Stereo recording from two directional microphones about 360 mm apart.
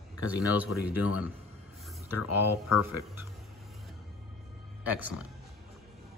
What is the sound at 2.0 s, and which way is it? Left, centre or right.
Speech, left.